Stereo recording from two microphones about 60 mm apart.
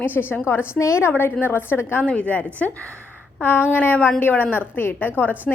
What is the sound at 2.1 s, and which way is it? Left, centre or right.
Speech, left.